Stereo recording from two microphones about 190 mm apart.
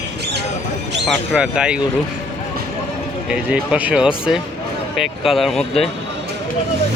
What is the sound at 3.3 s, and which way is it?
Speech, 5° right (ahead or behind).